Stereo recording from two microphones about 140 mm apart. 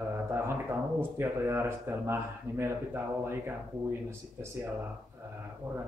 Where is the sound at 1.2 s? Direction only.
20° right (ahead or behind).